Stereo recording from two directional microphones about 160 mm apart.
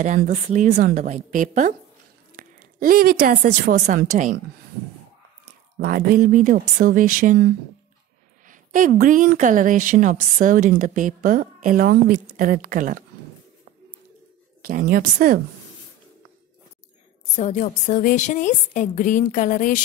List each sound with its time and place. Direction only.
0.0 s a woman's voice: 50° right (ahead or behind)
5.8 s a woman's voice: 65° right (ahead or behind)
8.5 s a woman's voice: 55° right (ahead or behind)
12.4 s a woman's voice: 60° right (ahead or behind)
14.6 s a woman's voice: 60° right (ahead or behind)
17.4 s a woman's voice: 50° left (ahead or behind)